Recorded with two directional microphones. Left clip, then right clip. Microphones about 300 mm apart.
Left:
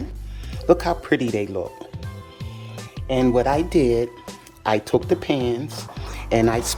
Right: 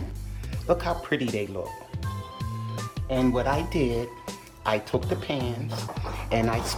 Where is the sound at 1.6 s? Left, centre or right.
Left.